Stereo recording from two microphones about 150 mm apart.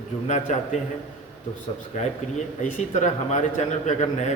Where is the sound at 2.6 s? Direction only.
55° left (ahead or behind).